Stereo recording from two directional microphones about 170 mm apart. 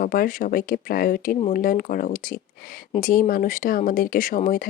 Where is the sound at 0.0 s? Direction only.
55° left (ahead or behind).